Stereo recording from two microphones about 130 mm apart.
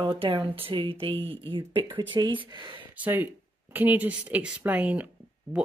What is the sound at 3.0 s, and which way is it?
Speech, 15° right (ahead or behind).